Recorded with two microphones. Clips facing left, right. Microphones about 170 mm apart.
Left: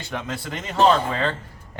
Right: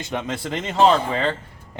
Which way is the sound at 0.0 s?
20° right (ahead or behind).